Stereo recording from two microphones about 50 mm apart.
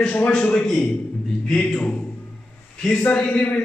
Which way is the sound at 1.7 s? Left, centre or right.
Left.